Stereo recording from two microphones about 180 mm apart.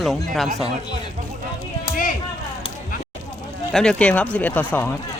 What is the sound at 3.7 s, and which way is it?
Speech, 5° left (ahead or behind).